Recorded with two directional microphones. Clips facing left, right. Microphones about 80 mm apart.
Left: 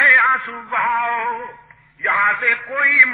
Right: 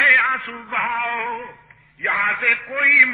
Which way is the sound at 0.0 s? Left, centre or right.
Left.